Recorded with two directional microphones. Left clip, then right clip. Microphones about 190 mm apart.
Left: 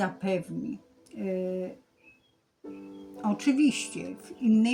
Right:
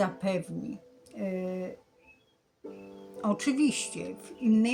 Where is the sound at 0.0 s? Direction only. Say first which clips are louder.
Even; 10° right (ahead or behind).